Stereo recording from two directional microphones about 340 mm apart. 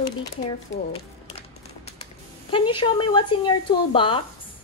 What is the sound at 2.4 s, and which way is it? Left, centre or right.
A woman's voice, centre.